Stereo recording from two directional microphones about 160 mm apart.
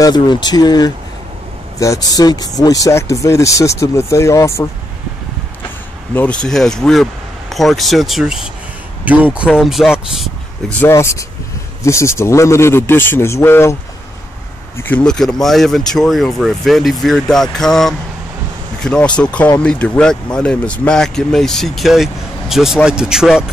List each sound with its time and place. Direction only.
0.0 s speech: 25° left (ahead or behind)
6.1 s speech: 5° left (ahead or behind)
10.8 s a man's voice: 15° left (ahead or behind)
14.8 s a man's voice: 10° left (ahead or behind)